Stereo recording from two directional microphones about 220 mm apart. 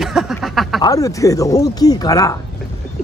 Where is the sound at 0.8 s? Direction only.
15° left (ahead or behind).